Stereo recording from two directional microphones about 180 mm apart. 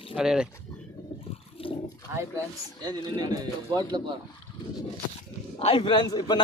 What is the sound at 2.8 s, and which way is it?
Speech, 25° right (ahead or behind).